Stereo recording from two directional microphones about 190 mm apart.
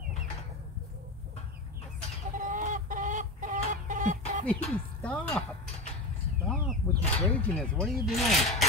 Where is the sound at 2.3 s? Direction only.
45° right (ahead or behind).